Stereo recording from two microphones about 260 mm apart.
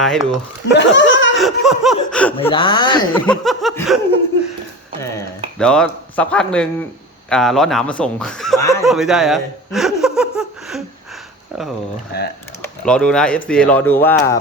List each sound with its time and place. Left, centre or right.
0.0 s speech: centre
0.7 s laughter: left
1.4 s speech: centre
2.5 s speech: centre
3.1 s speech: centre
5.5 s speech: centre
8.8 s speech: centre
12.1 s speech: left
12.8 s speech: centre